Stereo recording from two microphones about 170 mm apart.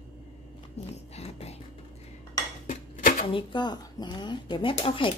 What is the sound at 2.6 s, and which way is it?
Dishes, 50° left (ahead or behind).